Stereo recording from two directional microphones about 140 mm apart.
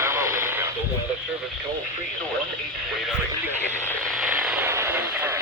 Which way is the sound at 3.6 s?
15° left (ahead or behind).